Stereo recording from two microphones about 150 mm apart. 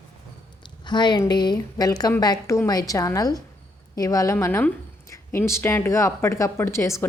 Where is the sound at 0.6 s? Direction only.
30° left (ahead or behind).